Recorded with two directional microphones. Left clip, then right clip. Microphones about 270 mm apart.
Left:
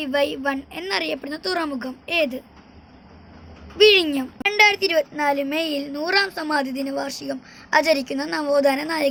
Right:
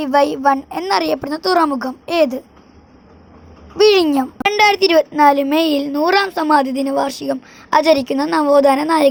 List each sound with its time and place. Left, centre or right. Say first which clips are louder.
0.0 s a woman's voice: right 8 dB; right
3.8 s a child's voice: right 3 dB; right